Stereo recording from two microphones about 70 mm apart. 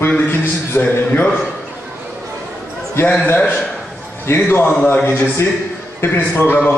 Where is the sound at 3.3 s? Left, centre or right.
Left.